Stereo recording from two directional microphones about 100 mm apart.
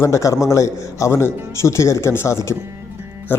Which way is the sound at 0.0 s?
30° left (ahead or behind).